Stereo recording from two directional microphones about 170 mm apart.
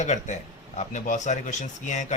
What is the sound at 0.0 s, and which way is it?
Speech, 45° left (ahead or behind).